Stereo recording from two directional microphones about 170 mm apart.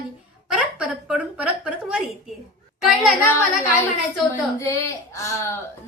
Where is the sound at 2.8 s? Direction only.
Centre (ahead or behind).